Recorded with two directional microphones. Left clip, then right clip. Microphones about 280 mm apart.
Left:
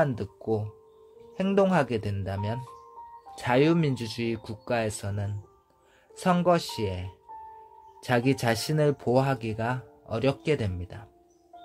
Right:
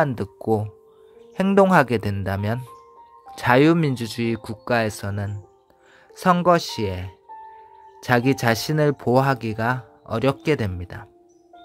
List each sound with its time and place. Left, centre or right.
0.0 s speech: right